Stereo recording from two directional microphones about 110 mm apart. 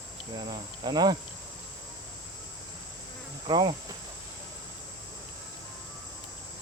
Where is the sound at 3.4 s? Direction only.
45° right (ahead or behind).